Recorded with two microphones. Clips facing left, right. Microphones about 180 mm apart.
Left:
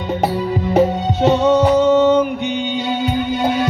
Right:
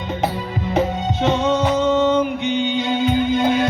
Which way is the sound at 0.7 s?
40° left (ahead or behind).